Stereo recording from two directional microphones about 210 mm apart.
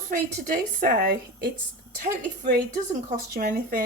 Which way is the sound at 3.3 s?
45° right (ahead or behind).